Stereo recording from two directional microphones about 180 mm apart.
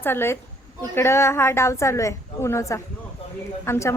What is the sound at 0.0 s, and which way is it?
A woman's voice, 10° left (ahead or behind).